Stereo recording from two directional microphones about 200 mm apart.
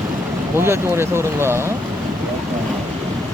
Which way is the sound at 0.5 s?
10° right (ahead or behind).